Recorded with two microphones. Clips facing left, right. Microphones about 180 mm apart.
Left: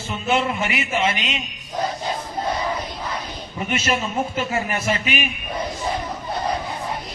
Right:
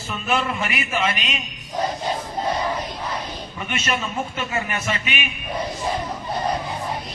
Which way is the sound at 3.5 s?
30° left (ahead or behind).